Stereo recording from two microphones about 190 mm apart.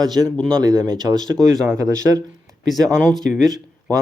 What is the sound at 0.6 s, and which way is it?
Speech, 20° right (ahead or behind).